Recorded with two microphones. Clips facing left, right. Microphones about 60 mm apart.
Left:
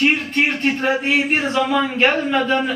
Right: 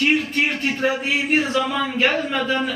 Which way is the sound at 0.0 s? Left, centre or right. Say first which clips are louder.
Left 2 dB; left.